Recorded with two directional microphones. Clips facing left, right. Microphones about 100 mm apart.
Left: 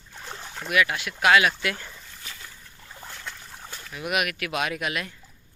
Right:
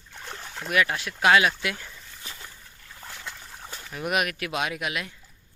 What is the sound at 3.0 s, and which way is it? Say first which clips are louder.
Trickle: even; 5° right (ahead or behind).